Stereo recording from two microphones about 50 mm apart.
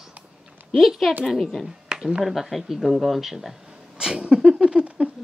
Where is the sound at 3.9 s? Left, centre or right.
Centre.